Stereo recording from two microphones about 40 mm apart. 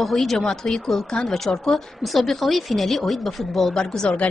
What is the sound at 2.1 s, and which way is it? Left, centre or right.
Speech, centre.